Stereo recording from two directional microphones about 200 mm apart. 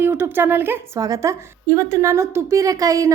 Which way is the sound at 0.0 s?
10° right (ahead or behind).